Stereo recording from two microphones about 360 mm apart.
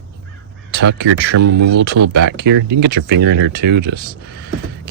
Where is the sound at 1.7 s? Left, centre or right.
Right.